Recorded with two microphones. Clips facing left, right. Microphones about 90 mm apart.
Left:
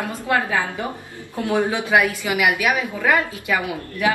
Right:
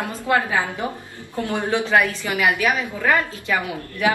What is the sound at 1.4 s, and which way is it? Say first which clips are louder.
A woman's voice: left 2 dB; 15° left (ahead or behind).